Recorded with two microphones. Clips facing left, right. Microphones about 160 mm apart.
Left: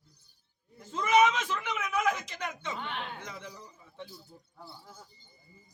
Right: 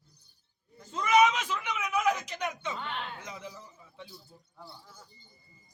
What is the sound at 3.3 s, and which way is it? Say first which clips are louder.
Speech: right 1 dB; 10° right (ahead or behind).